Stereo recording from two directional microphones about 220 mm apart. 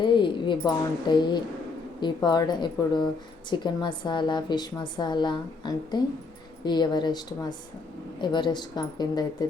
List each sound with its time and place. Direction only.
0.0 s a woman's voice: 20° left (ahead or behind)